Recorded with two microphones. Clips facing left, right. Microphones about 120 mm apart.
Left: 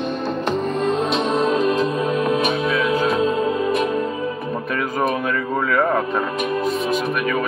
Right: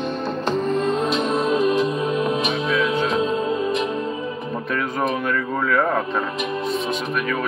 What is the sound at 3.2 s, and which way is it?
Music, 25° right (ahead or behind).